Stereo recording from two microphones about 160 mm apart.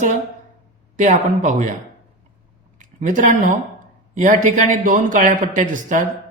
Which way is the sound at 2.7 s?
55° right (ahead or behind).